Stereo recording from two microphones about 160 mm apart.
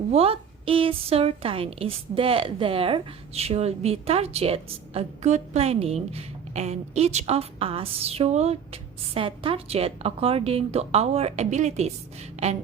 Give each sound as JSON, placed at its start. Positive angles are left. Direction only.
{"t": 0.1, "sound": "a woman's voice", "side_deg": -35}